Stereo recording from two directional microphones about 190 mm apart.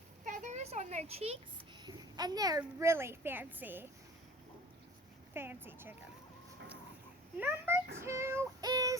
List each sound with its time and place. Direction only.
0.3 s a sound: 40° right (ahead or behind)
1.8 s a woman's voice: 20° right (ahead or behind)
5.3 s a child's voice: 10° right (ahead or behind)
7.3 s a child's voice: 10° right (ahead or behind)
8.0 s child singing: 15° right (ahead or behind)